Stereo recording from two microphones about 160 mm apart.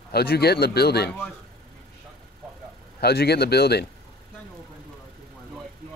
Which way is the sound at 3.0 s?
85° left.